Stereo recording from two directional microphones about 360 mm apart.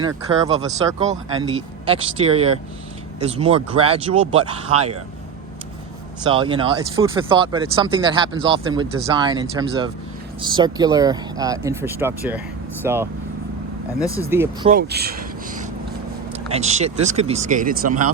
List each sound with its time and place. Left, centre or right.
0.0 s speech: centre
6.2 s speech: centre
14.0 s speech: centre
14.3 s speech: centre
14.7 s speech: right